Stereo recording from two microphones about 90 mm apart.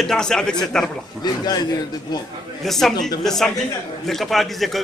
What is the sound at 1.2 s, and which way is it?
A man's voice, 50° left (ahead or behind).